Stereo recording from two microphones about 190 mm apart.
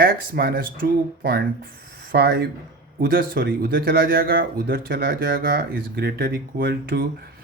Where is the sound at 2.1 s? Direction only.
55° right (ahead or behind).